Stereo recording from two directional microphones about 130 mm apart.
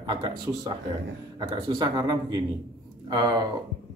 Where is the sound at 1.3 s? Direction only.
35° right (ahead or behind).